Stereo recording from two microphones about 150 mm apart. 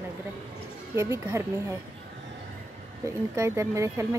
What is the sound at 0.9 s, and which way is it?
Speech, 20° right (ahead or behind).